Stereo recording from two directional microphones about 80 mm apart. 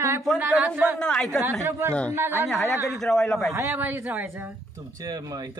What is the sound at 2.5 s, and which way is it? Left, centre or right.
Speech, centre.